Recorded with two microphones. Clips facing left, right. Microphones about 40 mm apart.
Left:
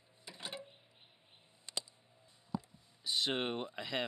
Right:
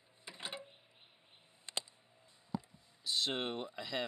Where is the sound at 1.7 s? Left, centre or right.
Right.